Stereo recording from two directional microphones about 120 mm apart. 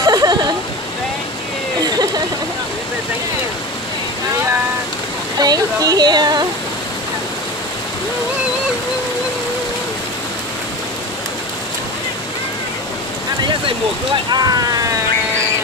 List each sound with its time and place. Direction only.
0.0 s a sound: 35° right (ahead or behind)
1.8 s vehicle: 35° right (ahead or behind)
5.4 s speech: 30° right (ahead or behind)
14.3 s speech: 35° right (ahead or behind)